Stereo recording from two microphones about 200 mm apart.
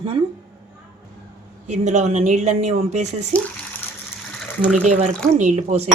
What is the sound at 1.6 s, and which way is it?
Dishes, 35° right (ahead or behind).